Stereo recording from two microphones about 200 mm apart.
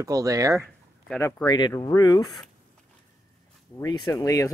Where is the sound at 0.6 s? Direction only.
10° left (ahead or behind).